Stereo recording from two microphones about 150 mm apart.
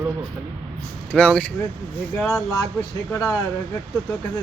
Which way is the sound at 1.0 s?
10° left (ahead or behind).